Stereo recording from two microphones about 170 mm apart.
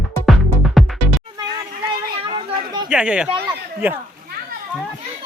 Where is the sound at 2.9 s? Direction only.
5° right (ahead or behind).